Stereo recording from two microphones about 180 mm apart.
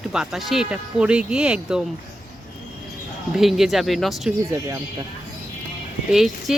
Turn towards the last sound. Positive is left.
turn(degrees=0)  # may be behind; listen again after turning